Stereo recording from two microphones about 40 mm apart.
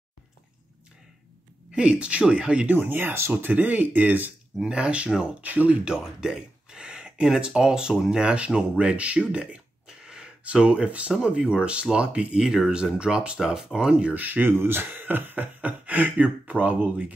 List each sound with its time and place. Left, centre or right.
1.7 s speech: right
2.9 s speech: right
3.5 s speech: right
4.6 s speech: right
5.4 s speech: right
5.9 s speech: centre; by 9.6 s right
9.8 s a sound: centre
10.4 s speech: right
12.4 s speech: centre
14.1 s speech: right
14.4 s speech: right
14.9 s speech: right
15.4 s speech: right